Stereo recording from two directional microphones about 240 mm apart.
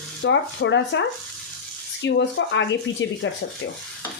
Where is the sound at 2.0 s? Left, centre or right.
Left.